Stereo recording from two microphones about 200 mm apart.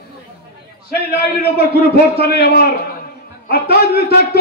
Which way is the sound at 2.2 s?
50° left (ahead or behind).